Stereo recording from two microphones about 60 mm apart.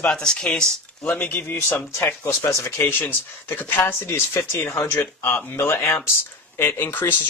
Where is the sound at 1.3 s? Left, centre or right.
Left.